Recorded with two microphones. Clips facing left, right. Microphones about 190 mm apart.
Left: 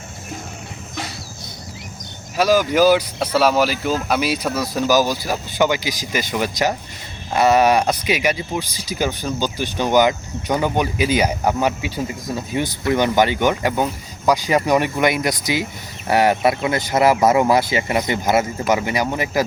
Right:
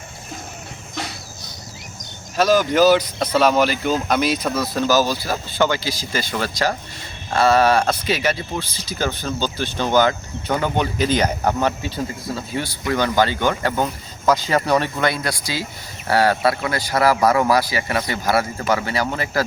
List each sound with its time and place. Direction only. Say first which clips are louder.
2.3 s speech: even; 10° left (ahead or behind)